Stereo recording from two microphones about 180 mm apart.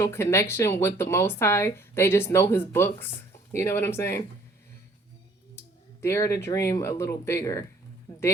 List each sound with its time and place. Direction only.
0.0 s speech: 15° left (ahead or behind)
5.5 s speech: 15° left (ahead or behind)